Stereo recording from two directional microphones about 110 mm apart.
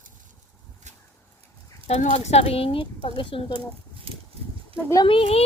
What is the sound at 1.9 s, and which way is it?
A woman's voice, 80° left.